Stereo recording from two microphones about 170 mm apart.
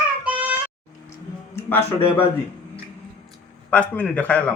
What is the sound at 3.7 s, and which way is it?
Speech, 5° left (ahead or behind).